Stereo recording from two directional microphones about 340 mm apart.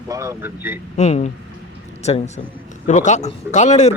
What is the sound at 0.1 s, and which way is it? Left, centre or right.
Speech, centre.